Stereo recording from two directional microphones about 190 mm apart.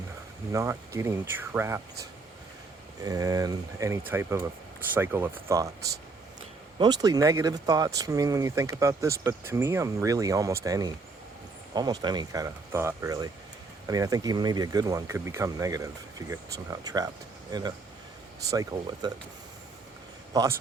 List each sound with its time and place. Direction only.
0.5 s speech: 15° right (ahead or behind)
3.0 s speech: 20° right (ahead or behind)
6.7 s speech: 20° right (ahead or behind)
20.3 s a man's voice: 20° right (ahead or behind)